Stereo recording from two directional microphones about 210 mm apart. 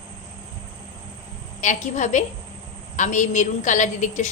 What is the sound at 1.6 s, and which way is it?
A woman's voice, 35° left (ahead or behind).